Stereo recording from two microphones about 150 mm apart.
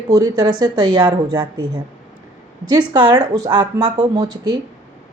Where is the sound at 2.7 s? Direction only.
30° right (ahead or behind).